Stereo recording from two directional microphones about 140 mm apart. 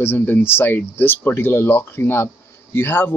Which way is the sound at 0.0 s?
15° left (ahead or behind).